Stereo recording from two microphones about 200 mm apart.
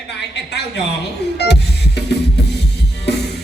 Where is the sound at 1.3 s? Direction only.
55° left (ahead or behind).